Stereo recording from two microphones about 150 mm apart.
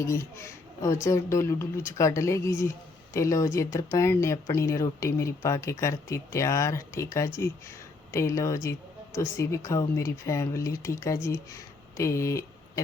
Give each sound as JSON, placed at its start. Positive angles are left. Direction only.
{"t": 0.0, "sound": "speech", "side_deg": 20}